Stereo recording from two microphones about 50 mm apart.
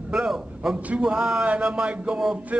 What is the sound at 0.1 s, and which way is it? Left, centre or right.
Speech, centre.